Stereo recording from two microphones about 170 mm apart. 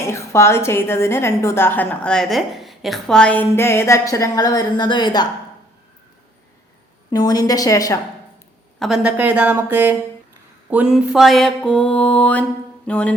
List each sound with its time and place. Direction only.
0.0 s a woman's voice: 15° left (ahead or behind)
7.1 s a woman's voice: 25° left (ahead or behind)
8.8 s a woman's voice: 5° right (ahead or behind)